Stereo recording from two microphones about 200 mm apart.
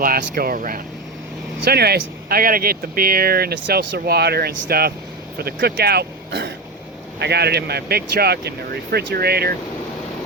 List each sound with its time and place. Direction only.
0.0 s speech: 45° right (ahead or behind)